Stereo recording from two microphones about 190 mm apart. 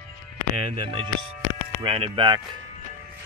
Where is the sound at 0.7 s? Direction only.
30° right (ahead or behind).